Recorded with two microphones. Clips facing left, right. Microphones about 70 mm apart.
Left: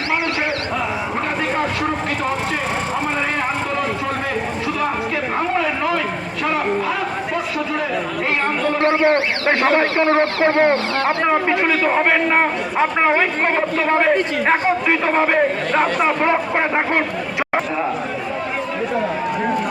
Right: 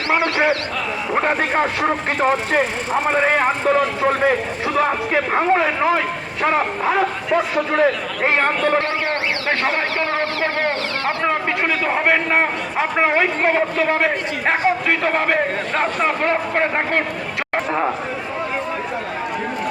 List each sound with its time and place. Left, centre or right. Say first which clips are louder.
1.1 s speech: right 7 dB; right
5.1 s speech: right 3 dB; right
8.8 s a man's voice: left 6 dB; left
11.3 s a man's voice: left 2 dB; centre